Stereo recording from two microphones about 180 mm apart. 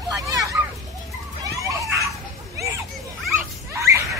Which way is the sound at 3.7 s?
15° right (ahead or behind).